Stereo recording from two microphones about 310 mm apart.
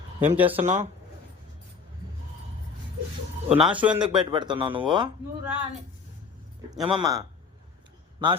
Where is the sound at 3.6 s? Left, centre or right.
Centre.